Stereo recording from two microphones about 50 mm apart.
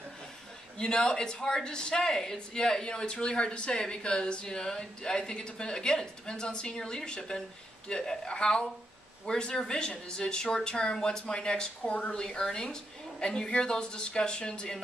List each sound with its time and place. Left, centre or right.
0.7 s speech: centre
12.2 s speech: centre